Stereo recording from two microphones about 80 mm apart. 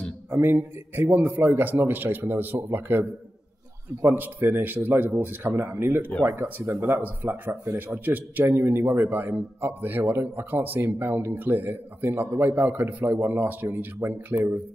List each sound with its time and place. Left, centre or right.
0.3 s a man's voice: right